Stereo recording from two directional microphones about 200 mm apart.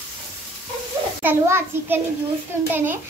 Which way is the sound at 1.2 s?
10° right (ahead or behind).